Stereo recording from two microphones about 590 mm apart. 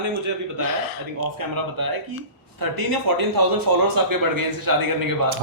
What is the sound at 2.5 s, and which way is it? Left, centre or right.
Speech, right.